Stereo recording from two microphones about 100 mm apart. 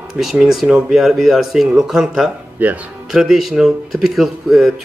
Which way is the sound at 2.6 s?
15° right (ahead or behind).